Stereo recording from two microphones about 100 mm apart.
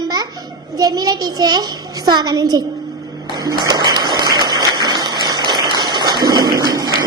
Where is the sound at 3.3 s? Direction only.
45° right (ahead or behind).